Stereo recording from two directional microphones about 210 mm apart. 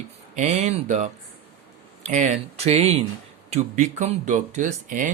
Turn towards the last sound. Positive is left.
turn(degrees=-40)  # may be behind; listen again after turning